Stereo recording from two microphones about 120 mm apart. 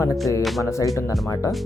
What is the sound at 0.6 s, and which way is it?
Speech, 25° left (ahead or behind).